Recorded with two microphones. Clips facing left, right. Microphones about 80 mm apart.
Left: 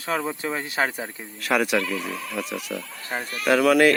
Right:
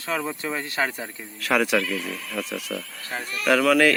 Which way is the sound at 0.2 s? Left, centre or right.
Centre.